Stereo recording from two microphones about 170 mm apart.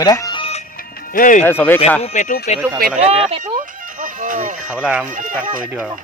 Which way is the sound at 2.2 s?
55° left (ahead or behind).